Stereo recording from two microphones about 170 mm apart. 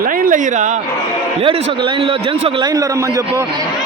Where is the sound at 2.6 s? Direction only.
20° right (ahead or behind).